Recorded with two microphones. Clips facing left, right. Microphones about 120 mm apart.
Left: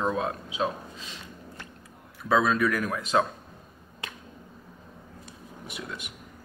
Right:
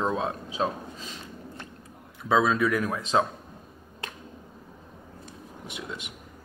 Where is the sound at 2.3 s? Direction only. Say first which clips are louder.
Right 1 dB; 20° right (ahead or behind).